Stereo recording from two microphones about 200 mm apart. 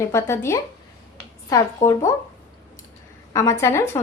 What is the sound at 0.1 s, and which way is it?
A woman's voice, 15° left (ahead or behind).